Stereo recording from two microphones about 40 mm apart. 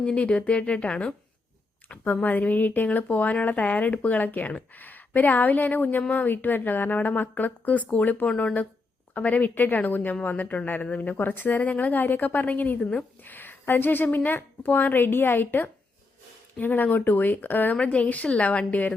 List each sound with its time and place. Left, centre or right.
0.0 s speech: left
2.2 s a woman's voice: left
6.1 s a woman's voice: left
6.3 s a woman's voice: left
12.8 s speech: left
13.2 s a woman's voice: left
16.6 s a woman's voice: left
17.8 s speech: left